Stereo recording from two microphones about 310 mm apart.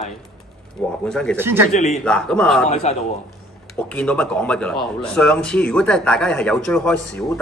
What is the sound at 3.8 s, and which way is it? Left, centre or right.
Speech, centre.